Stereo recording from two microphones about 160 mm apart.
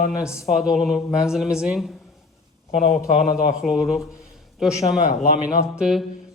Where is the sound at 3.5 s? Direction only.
5° right (ahead or behind).